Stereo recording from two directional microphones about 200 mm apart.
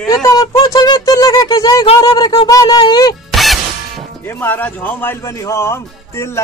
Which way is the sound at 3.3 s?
Centre (ahead or behind).